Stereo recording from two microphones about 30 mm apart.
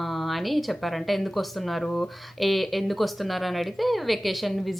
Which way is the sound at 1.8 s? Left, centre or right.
Left.